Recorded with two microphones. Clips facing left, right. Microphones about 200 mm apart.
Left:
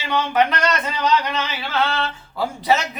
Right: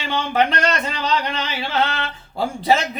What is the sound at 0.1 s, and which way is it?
Speech, 30° right (ahead or behind).